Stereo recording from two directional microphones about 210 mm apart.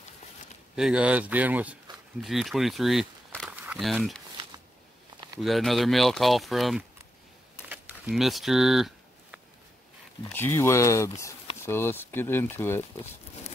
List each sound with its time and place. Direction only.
0.7 s speech: 5° right (ahead or behind)
5.4 s speech: centre (ahead or behind)
7.6 s a sound: 10° right (ahead or behind)
10.3 s speech: 10° left (ahead or behind)